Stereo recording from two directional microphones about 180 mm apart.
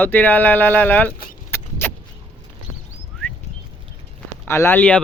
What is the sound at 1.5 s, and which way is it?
Vehicle, 10° left (ahead or behind).